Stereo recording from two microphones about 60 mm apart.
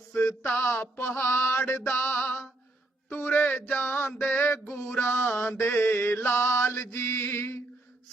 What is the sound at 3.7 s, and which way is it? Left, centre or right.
Mantra, left.